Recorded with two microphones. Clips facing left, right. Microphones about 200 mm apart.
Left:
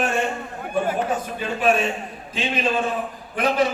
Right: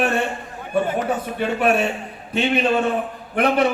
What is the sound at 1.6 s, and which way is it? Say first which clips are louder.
A man's voice: even; 65° right (ahead or behind).